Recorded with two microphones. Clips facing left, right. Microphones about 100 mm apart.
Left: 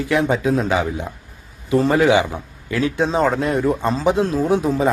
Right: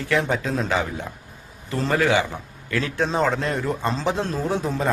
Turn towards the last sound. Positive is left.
turn(degrees=10)  # may be behind; listen again after turning